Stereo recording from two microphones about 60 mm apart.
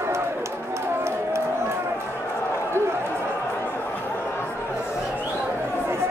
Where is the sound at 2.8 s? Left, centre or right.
Right.